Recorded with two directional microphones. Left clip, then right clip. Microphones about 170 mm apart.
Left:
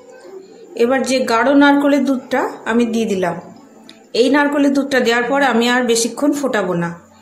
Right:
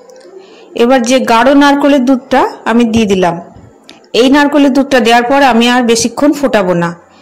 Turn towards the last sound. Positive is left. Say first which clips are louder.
# right 8 dB
turn(degrees=-35)  # may be behind; listen again after turning